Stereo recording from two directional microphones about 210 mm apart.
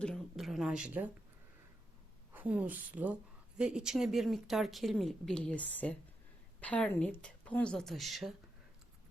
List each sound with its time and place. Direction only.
0.0 s speech: centre (ahead or behind)
2.3 s a woman's voice: 5° right (ahead or behind)